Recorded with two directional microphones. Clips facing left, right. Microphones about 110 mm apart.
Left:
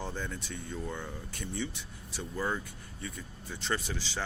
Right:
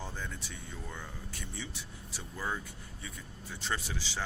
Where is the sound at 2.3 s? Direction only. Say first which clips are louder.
Left 3 dB; centre (ahead or behind).